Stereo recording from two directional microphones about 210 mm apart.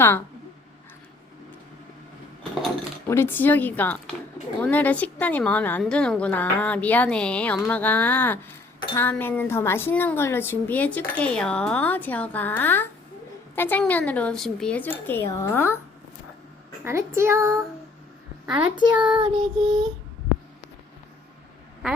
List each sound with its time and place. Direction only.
3.1 s a woman's voice: 10° left (ahead or behind)
16.8 s child singing: 10° right (ahead or behind)
18.9 s child singing: 5° right (ahead or behind)
19.1 s child singing: 25° right (ahead or behind)